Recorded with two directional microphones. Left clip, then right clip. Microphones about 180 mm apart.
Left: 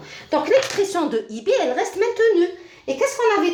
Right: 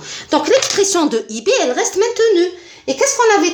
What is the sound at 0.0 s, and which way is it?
Speech, 50° right (ahead or behind).